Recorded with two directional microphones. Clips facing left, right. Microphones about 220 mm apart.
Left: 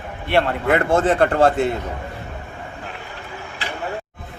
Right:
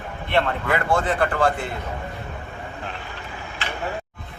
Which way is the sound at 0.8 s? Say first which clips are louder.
Left 4 dB; 45° left (ahead or behind).